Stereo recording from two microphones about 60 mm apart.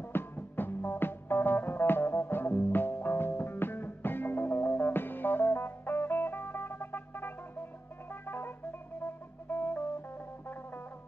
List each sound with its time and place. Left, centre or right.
0.0 s music: left